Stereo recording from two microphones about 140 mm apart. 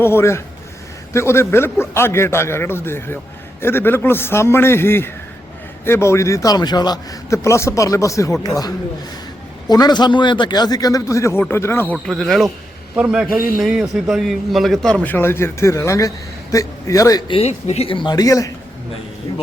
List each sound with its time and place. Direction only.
0.0 s a man's voice: 20° left (ahead or behind)
12.0 s a man's voice: centre (ahead or behind); by 17.3 s 25° left (ahead or behind)
17.3 s a man's voice: 45° left (ahead or behind); by 18.5 s 25° left (ahead or behind)